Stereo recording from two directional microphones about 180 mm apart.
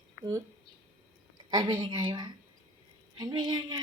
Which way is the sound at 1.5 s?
25° right (ahead or behind).